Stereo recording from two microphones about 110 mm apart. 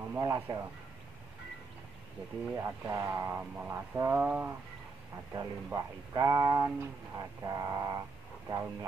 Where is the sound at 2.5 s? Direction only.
20° right (ahead or behind).